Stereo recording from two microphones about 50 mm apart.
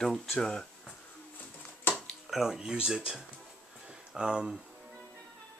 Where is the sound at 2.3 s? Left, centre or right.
Centre.